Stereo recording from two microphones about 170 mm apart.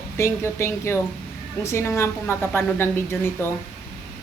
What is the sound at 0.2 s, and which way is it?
A woman's voice, 15° left (ahead or behind).